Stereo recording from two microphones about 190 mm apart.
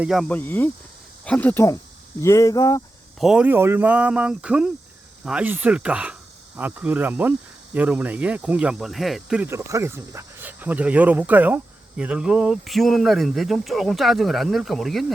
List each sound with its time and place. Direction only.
0.0 s speech: centre (ahead or behind); by 2.8 s 15° left (ahead or behind)
3.2 s cricket: 5° right (ahead or behind)
5.2 s speech: 5° right (ahead or behind)
6.6 s cricket: 10° right (ahead or behind)